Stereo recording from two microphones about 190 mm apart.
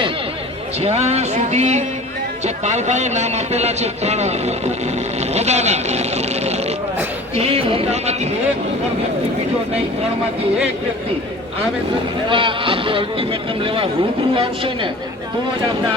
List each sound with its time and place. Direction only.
0.8 s speech: 35° right (ahead or behind)
12.3 s speech: 25° right (ahead or behind)